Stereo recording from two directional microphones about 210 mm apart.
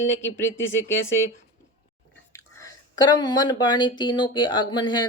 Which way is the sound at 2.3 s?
15° left (ahead or behind).